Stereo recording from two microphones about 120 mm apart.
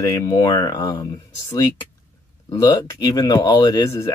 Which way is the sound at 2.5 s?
25° left (ahead or behind).